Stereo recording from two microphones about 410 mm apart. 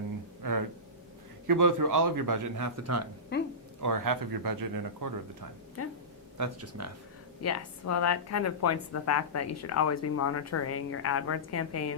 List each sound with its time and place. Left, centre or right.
1.5 s speech: right
3.3 s speech: left
3.8 s speech: right
5.8 s a woman's voice: left
6.3 s speech: right
7.4 s a woman's voice: left